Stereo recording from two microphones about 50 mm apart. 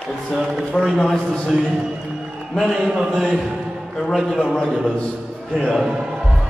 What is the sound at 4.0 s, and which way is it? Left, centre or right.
Speech, centre.